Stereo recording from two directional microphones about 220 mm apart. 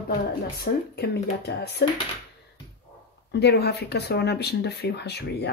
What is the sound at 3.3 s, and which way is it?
Speech, 50° left (ahead or behind).